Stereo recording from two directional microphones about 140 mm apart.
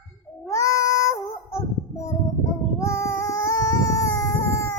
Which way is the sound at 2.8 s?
20° left (ahead or behind).